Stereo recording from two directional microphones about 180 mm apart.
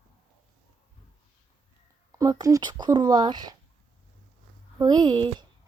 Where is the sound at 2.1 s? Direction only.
20° right (ahead or behind).